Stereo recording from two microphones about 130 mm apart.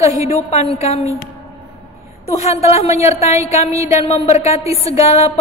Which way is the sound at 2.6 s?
55° left (ahead or behind).